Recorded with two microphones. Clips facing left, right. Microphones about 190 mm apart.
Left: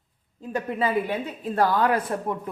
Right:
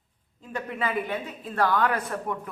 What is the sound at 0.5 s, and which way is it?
A woman's voice, 30° left (ahead or behind).